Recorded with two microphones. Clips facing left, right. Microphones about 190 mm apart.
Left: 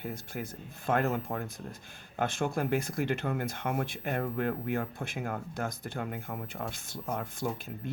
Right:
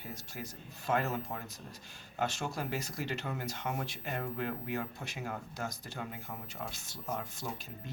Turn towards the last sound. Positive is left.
turn(degrees=55)  # may be behind; listen again after turning